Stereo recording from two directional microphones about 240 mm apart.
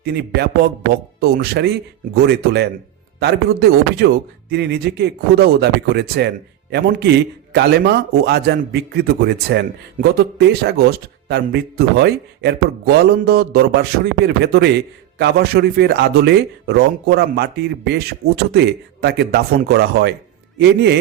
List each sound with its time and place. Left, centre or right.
0.0 s speech: right